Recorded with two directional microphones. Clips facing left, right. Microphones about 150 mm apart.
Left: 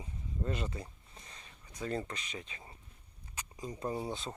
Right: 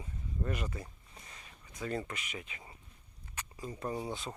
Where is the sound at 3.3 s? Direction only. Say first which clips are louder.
Even; 15° left (ahead or behind).